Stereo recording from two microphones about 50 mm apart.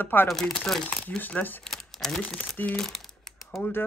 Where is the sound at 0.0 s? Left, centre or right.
Left.